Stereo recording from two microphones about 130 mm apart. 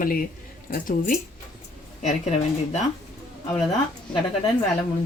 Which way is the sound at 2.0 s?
60° left (ahead or behind).